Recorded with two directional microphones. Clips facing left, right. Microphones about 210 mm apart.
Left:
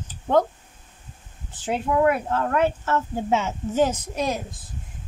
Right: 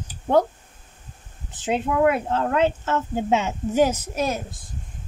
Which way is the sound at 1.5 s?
20° right (ahead or behind).